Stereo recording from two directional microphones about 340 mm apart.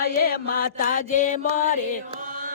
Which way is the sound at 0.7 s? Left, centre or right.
Left.